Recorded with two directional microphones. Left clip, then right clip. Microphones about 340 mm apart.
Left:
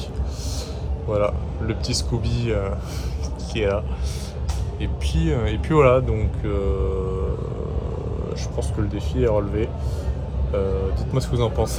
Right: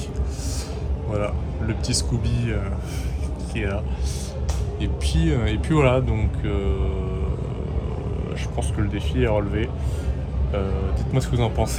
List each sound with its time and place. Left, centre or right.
1.1 s speech: centre
4.8 s speech: centre
8.8 s speech: centre
11.1 s speech: centre